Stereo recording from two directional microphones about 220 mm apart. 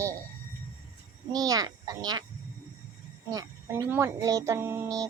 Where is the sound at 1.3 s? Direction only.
15° right (ahead or behind).